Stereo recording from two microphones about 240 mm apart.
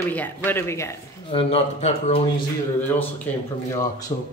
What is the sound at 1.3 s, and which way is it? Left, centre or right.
Speech, left.